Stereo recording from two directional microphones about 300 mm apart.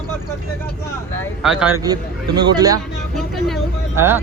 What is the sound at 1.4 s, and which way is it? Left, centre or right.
A man's voice, centre.